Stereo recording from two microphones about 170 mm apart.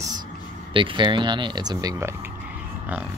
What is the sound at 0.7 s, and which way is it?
Speech, 30° right (ahead or behind).